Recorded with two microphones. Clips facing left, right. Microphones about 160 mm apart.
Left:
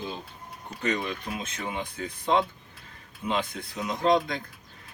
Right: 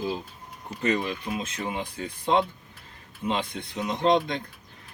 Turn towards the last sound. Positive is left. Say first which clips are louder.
# right 1 dB
turn(degrees=0)  # may be behind; listen again after turning